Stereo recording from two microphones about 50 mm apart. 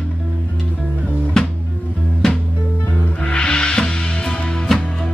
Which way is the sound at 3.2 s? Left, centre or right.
Centre.